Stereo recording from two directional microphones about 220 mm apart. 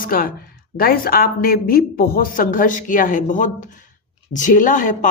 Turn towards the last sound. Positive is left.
turn(degrees=35)  # may be behind; listen again after turning